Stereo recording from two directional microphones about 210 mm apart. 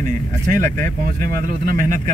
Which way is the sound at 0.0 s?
40° right (ahead or behind).